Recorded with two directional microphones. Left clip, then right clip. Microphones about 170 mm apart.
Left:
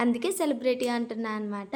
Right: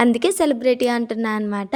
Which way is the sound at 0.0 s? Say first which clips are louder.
Right 10 dB; 50° right (ahead or behind).